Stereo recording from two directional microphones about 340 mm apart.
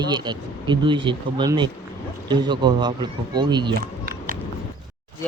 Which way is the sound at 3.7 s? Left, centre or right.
Right.